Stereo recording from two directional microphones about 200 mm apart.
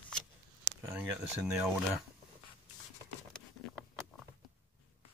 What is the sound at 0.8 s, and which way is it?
Speech, 10° right (ahead or behind).